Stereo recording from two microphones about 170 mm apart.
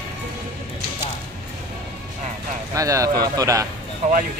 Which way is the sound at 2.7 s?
20° right (ahead or behind).